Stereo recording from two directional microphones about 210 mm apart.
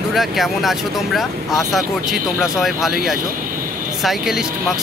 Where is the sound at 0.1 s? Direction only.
Centre (ahead or behind).